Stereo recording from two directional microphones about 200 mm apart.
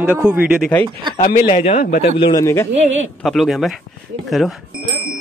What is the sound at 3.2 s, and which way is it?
Speech, centre (ahead or behind).